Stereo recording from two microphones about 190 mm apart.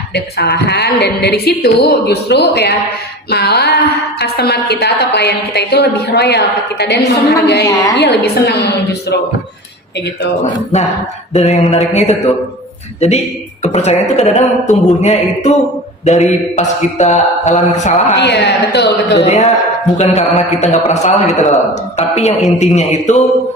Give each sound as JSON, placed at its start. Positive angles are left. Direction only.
{"t": 0.1, "sound": "a woman's voice", "side_deg": 60}
{"t": 10.4, "sound": "a man's voice", "side_deg": 35}
{"t": 16.6, "sound": "a man's voice", "side_deg": 40}
{"t": 18.2, "sound": "a woman's voice", "side_deg": 60}
{"t": 19.2, "sound": "a man's voice", "side_deg": 35}